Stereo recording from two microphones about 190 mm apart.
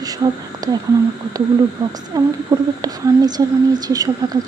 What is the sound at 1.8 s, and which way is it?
A woman's voice, 15° right (ahead or behind).